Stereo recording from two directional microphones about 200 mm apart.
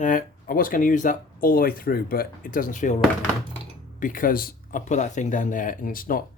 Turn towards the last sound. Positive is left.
turn(degrees=45)  # may be behind; listen again after turning